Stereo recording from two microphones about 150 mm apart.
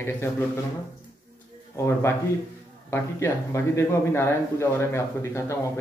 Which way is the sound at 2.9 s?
20° left (ahead or behind).